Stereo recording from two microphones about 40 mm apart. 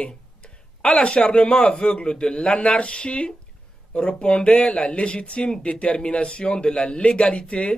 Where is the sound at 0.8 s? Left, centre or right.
Left.